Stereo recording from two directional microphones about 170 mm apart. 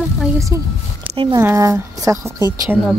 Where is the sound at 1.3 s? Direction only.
15° right (ahead or behind).